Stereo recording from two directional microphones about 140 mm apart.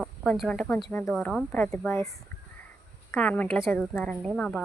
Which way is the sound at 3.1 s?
10° left (ahead or behind).